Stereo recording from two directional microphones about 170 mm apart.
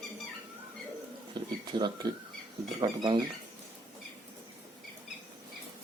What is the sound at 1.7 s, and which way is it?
Speech, 25° right (ahead or behind).